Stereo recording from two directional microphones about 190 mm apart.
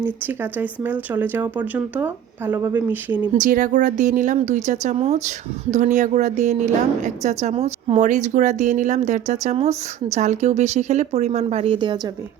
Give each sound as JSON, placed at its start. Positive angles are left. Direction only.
{"t": 0.6, "sound": "speech", "side_deg": -10}
{"t": 3.3, "sound": "speech", "side_deg": -45}